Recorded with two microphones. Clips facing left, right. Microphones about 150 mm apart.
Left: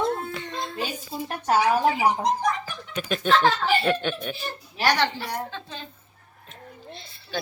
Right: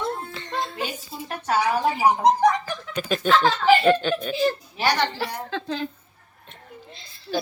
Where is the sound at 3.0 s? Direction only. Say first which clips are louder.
Right 1 dB; centre (ahead or behind).